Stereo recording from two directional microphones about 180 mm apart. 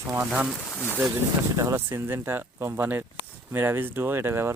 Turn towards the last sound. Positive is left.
turn(degrees=-15)  # may be behind; listen again after turning